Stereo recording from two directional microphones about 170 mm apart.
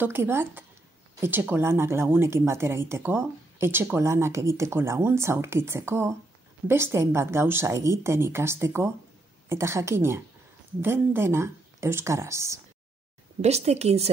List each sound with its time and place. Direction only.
0.0 s speech: 15° right (ahead or behind)
13.4 s speech: 40° right (ahead or behind)